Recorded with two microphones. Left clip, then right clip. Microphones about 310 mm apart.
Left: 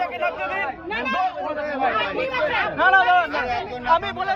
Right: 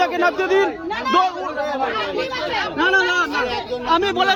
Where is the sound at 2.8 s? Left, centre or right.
Centre.